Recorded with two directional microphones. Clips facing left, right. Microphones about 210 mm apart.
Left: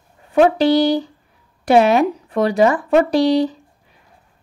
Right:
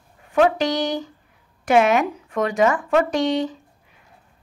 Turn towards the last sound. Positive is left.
turn(degrees=35)  # may be behind; listen again after turning